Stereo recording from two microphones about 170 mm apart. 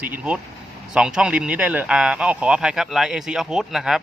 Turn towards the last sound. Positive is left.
turn(degrees=-5)  # may be behind; listen again after turning